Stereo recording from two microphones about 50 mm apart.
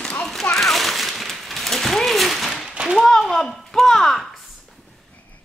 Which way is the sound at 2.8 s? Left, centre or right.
Centre.